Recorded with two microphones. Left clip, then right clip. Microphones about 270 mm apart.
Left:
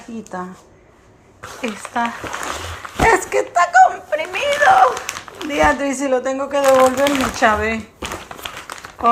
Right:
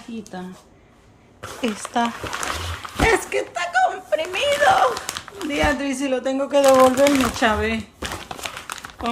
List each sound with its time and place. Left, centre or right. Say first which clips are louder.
1.6 s speech: left 1 dB; centre